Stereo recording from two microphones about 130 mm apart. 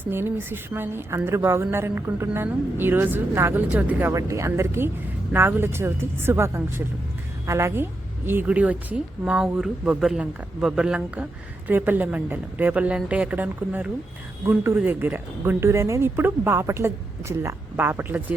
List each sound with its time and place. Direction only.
0.0 s speech: 15° right (ahead or behind)
4.1 s speech: 25° right (ahead or behind)